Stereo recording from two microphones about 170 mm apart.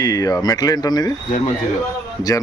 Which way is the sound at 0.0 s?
20° left (ahead or behind).